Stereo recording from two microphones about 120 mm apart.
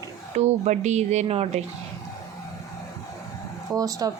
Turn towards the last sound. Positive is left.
turn(degrees=-30)  # may be behind; listen again after turning